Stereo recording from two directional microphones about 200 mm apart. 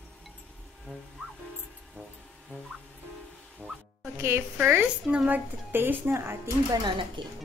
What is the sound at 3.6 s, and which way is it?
Boing, 10° right (ahead or behind).